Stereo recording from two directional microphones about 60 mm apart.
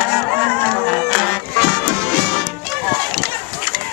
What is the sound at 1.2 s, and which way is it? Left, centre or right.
Music, centre.